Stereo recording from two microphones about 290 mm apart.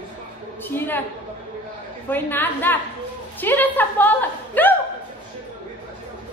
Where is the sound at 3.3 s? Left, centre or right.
Centre.